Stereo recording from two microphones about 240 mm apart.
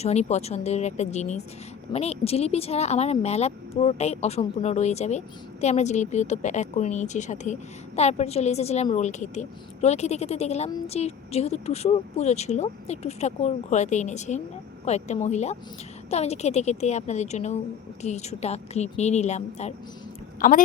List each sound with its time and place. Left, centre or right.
0.0 s a woman's voice: left